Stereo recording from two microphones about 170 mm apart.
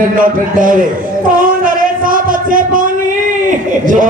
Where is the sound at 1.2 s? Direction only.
55° right (ahead or behind).